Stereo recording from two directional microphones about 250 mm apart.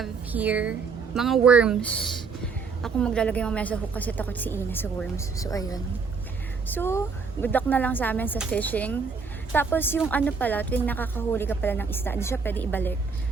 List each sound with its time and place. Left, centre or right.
0.0 s a woman's voice: centre